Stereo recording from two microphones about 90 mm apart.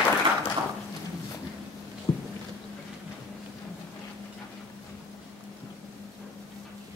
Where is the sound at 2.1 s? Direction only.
50° left (ahead or behind).